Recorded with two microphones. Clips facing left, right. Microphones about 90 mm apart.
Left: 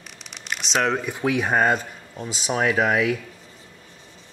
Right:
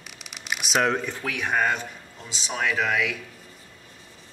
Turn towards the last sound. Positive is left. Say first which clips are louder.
# left 5 dB
turn(degrees=35)  # may be behind; listen again after turning